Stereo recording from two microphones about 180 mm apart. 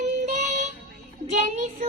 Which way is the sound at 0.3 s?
40° right (ahead or behind).